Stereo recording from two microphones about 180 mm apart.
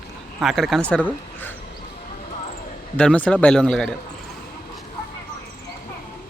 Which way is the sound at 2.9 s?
5° left (ahead or behind).